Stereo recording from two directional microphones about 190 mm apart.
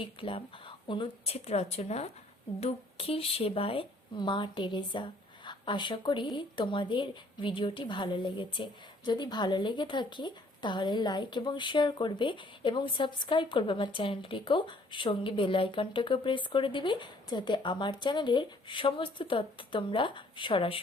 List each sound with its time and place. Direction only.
0.0 s a woman's voice: 30° left (ahead or behind)